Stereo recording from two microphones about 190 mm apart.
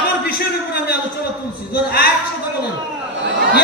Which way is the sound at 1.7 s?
55° left (ahead or behind).